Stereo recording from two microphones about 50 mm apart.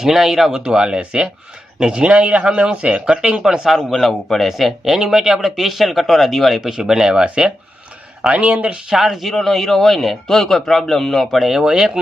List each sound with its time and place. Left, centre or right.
0.0 s speech: centre
3.8 s a man's voice: centre
8.3 s speech: right
8.9 s a man's voice: centre